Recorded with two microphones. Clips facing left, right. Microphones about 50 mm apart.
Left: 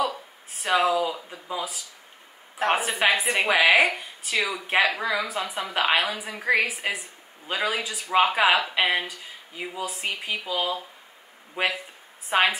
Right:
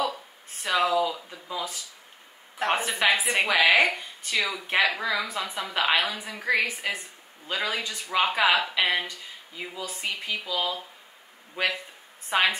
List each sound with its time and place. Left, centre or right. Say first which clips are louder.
0.0 s a sound: left 2 dB; centre
1.0 s a woman's voice: left 1 dB; centre
12.3 s a woman's voice: left 2 dB; centre